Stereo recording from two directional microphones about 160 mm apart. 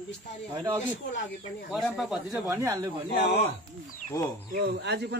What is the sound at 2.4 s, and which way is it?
Speech, 20° right (ahead or behind).